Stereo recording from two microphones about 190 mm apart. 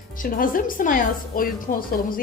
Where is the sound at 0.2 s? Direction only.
45° left (ahead or behind).